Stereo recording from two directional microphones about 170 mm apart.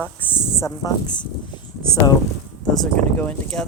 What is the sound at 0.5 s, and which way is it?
Speech, 20° left (ahead or behind).